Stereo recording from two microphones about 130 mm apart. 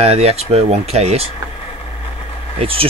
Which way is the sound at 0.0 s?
55° right (ahead or behind).